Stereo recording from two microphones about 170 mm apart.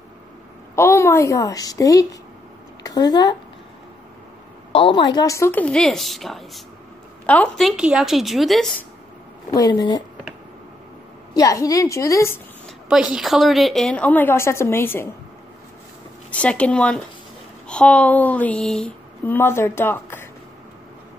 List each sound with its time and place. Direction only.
0.7 s a woman's voice: 15° left (ahead or behind)
4.7 s a woman's voice: 30° left (ahead or behind); by 8.8 s centre (ahead or behind)
9.5 s a woman's voice: 25° left (ahead or behind)
11.3 s a woman's voice: 20° left (ahead or behind)
12.6 s a woman's voice: 5° right (ahead or behind); by 15.0 s 15° left (ahead or behind)
16.3 s speech: 5° left (ahead or behind)